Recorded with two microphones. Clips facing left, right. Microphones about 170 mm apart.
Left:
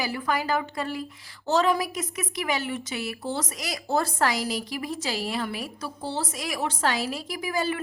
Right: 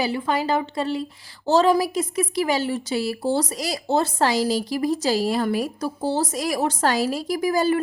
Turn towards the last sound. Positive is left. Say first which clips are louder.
# right 8 dB
turn(degrees=-40)  # may be behind; listen again after turning